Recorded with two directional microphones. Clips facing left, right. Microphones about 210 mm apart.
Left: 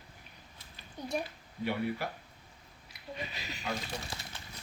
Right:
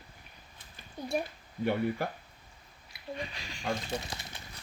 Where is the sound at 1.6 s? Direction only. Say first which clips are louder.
Right 4 dB; 50° right (ahead or behind).